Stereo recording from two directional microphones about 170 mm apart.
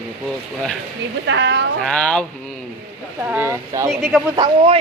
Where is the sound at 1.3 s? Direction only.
90° right.